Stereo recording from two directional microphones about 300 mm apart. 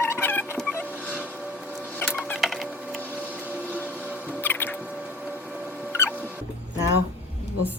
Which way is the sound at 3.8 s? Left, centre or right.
Centre.